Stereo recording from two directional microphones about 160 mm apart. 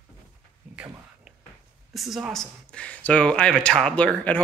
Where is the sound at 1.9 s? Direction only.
Centre (ahead or behind).